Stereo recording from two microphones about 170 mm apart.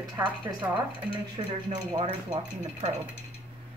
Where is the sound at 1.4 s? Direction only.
30° right (ahead or behind).